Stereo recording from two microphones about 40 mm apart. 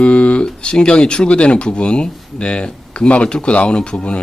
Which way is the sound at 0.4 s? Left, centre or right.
Left.